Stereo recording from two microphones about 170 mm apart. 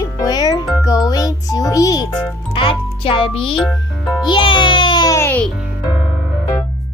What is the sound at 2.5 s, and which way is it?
A child's voice, 30° left (ahead or behind).